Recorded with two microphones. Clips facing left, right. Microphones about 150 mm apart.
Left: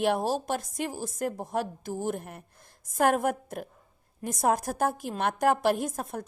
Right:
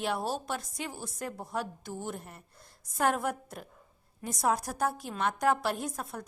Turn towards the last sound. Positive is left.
turn(degrees=50)  # may be behind; listen again after turning